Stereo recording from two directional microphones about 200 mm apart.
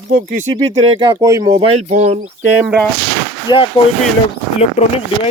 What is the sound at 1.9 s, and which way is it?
Speech, 35° right (ahead or behind).